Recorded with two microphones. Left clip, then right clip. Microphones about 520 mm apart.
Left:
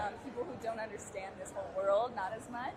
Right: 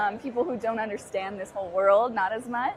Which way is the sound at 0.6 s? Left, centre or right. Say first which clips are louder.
Right 11 dB; right.